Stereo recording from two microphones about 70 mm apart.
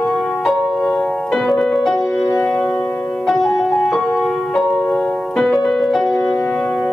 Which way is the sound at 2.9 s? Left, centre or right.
Left.